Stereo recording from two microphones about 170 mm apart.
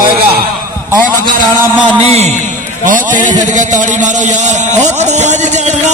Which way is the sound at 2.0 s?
40° right (ahead or behind).